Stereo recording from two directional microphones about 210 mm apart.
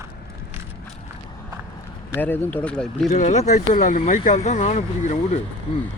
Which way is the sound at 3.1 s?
35° left (ahead or behind).